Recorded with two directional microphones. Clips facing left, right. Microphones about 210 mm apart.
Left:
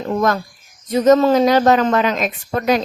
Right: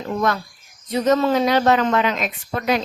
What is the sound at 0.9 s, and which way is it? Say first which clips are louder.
A woman's voice: left 5 dB; 45° left (ahead or behind).